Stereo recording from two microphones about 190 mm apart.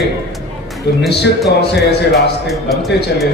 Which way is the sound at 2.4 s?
Centre (ahead or behind).